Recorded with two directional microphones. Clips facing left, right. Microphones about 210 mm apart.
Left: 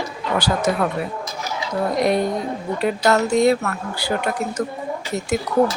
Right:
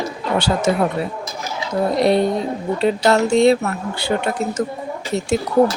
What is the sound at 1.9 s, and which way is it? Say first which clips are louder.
Speech: right 3 dB; 30° right (ahead or behind).